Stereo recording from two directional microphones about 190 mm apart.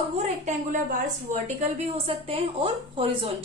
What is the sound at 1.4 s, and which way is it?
A woman's voice, 30° right (ahead or behind).